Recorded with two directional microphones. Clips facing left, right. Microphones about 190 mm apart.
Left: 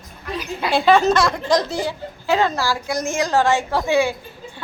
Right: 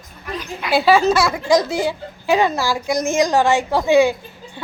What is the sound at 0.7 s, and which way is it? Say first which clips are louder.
A woman's voice: right 1 dB; 5° right (ahead or behind).